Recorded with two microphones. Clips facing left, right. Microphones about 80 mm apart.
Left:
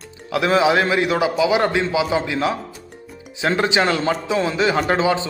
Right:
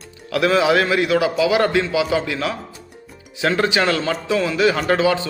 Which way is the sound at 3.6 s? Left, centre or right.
Left.